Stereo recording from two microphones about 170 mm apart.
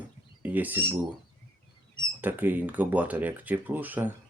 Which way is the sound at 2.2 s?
10° right (ahead or behind).